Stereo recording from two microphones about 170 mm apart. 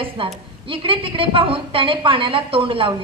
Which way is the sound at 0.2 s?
30° right (ahead or behind).